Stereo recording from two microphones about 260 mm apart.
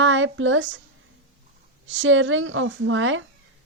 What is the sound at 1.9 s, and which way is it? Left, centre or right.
A woman's voice, right.